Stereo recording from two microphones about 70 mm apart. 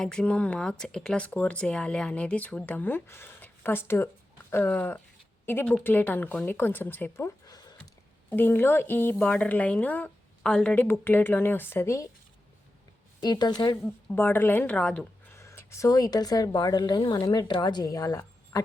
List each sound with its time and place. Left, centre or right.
0.0 s speech: centre
7.4 s a sound: left
8.3 s speech: left; by 10.8 s centre
10.8 s speech: left
13.2 s speech: left
13.8 s speech: left
14.7 s speech: centre
15.3 s speech: left
17.2 s speech: left